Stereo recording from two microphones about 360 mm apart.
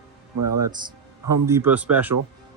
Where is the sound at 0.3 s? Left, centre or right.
Right.